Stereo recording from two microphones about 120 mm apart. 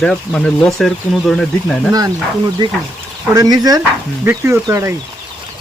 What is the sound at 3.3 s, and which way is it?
Speech, 30° right (ahead or behind).